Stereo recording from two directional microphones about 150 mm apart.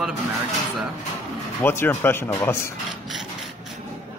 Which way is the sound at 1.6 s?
15° left (ahead or behind).